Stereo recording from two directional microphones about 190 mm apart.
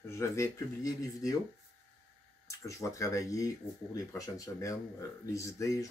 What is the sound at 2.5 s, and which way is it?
Speech, 15° left (ahead or behind).